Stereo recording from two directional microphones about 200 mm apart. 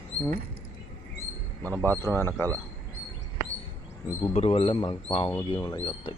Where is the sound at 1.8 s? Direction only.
10° left (ahead or behind).